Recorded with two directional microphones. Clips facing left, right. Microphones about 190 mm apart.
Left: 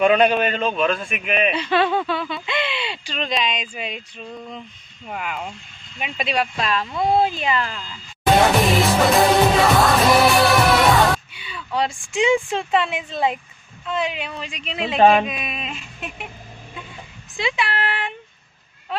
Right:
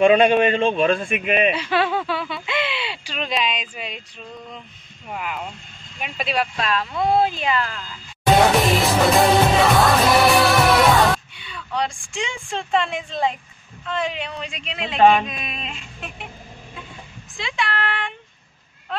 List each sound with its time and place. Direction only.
0.0 s a man's voice: 30° right (ahead or behind)
1.5 s speech: 5° right (ahead or behind)
5.1 s speech: centre (ahead or behind)
8.4 s music: centre (ahead or behind)
13.8 s speech: 5° left (ahead or behind)
17.4 s speech: 5° left (ahead or behind)